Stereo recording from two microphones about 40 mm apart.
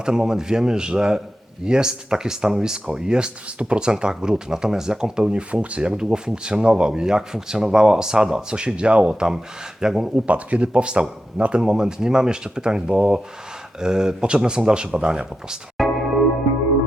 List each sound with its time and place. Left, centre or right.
0.0 s a man's voice: centre
10.2 s speech: right; by 15.2 s centre
15.8 s music: centre